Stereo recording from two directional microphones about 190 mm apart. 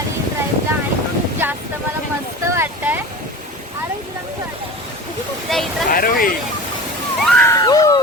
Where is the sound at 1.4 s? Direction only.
10° right (ahead or behind).